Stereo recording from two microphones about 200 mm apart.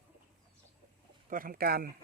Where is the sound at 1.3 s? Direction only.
45° right (ahead or behind).